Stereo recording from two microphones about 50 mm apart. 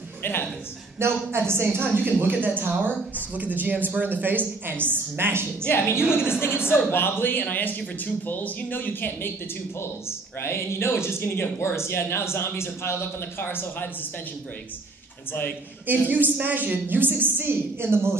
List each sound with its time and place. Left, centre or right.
0.2 s a sound: left
0.9 s a woman's voice: right
5.7 s speech: left
9.8 s speech: left
13.4 s speech: left
16.1 s a woman's voice: right